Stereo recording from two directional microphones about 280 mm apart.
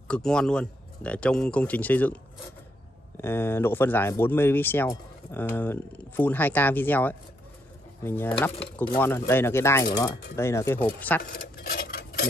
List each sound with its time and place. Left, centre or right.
0.1 s speech: centre
3.2 s speech: centre
11.3 s a sound: left